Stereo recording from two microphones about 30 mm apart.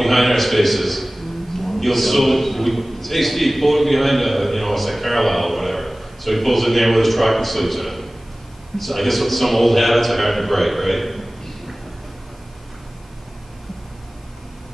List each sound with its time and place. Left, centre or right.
0.0 s a man's voice: centre